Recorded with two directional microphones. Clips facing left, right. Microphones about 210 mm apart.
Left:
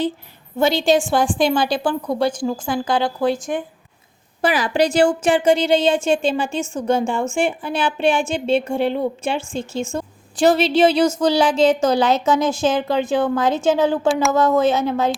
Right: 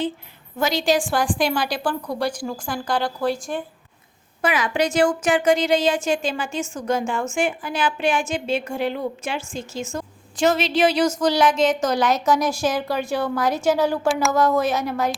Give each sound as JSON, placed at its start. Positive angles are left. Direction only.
{"t": 0.6, "sound": "a woman's voice", "side_deg": 25}
{"t": 4.4, "sound": "a woman's voice", "side_deg": 35}
{"t": 14.1, "sound": "speech", "side_deg": 0}
{"t": 14.3, "sound": "a woman's voice", "side_deg": 20}